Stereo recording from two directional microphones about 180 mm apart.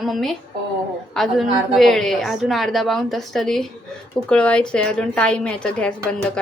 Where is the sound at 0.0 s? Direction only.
Centre (ahead or behind).